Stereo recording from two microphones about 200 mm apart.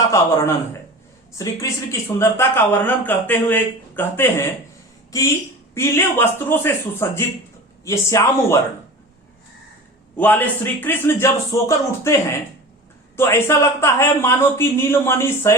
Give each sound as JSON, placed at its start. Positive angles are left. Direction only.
{"t": 0.0, "sound": "speech", "side_deg": 15}
{"t": 10.2, "sound": "speech", "side_deg": 10}
{"t": 13.1, "sound": "speech", "side_deg": 15}